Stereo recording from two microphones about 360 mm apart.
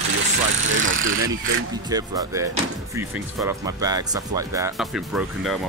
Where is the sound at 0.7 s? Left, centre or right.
Right.